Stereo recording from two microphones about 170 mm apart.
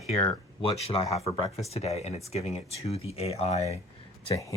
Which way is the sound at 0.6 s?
30° left (ahead or behind).